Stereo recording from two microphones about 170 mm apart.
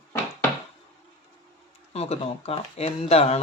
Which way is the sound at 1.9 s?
40° left (ahead or behind).